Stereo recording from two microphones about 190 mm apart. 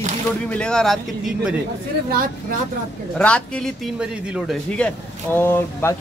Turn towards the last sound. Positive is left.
turn(degrees=10)  # may be behind; listen again after turning